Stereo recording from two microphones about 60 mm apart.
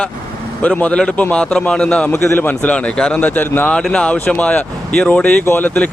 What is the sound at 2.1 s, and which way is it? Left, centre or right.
Speech, left.